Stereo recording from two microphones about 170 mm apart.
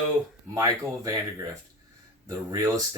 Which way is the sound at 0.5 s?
20° right (ahead or behind).